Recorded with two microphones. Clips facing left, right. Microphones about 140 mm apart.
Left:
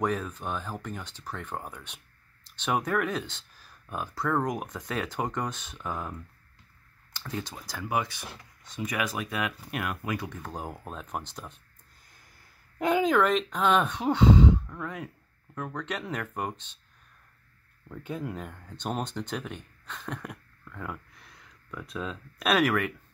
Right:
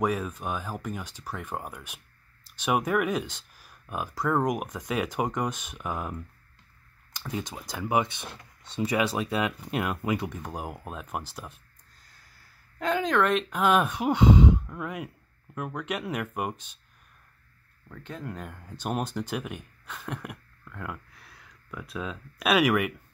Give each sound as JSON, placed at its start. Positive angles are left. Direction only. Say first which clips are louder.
{"t": 0.0, "sound": "speech", "louder": "right 2 dB", "side_deg": -10}
{"t": 7.2, "sound": "speech", "louder": "right 2 dB", "side_deg": -15}
{"t": 12.7, "sound": "speech", "louder": "left 2 dB", "side_deg": 10}
{"t": 17.8, "sound": "speech", "louder": "left 3 dB", "side_deg": 10}